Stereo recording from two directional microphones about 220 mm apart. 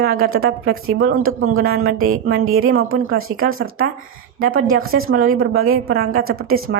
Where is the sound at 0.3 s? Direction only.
70° right (ahead or behind).